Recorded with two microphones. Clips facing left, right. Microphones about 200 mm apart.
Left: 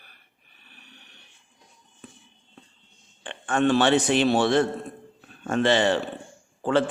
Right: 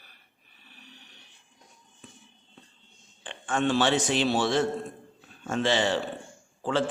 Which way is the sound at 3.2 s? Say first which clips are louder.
Left 4 dB; 60° left (ahead or behind).